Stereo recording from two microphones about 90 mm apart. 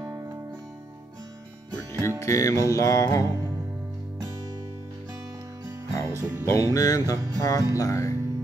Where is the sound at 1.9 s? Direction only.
35° left (ahead or behind).